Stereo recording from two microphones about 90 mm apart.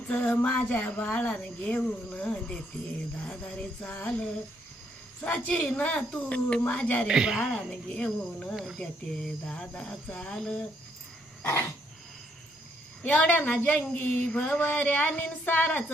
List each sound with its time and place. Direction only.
0.1 s a woman's voice: 20° left (ahead or behind)
7.1 s speech: 10° right (ahead or behind)
7.7 s a woman's voice: 10° left (ahead or behind)
13.0 s a woman's voice: 15° left (ahead or behind)